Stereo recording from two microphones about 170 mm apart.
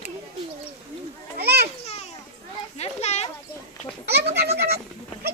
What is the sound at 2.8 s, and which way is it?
Speech, 40° left (ahead or behind).